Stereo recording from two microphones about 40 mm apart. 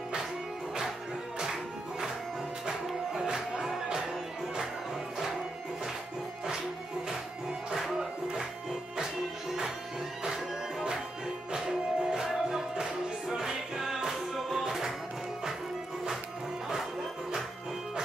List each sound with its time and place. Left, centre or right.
1.4 s music: centre
3.2 s music: centre
7.7 s music: centre